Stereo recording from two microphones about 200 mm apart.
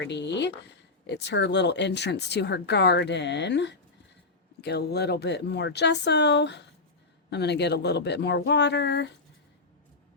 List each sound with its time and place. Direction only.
0.0 s speech: 60° left (ahead or behind)